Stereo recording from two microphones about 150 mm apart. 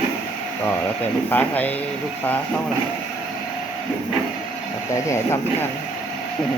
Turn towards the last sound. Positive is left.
turn(degrees=20)  # may be behind; listen again after turning